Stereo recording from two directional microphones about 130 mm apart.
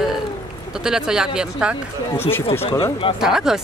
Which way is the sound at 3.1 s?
5° right (ahead or behind).